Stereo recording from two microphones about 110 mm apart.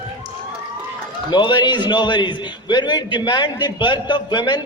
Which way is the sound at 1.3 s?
45° left (ahead or behind).